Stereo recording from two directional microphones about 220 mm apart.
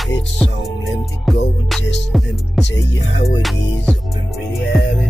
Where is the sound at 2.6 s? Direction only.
50° left (ahead or behind).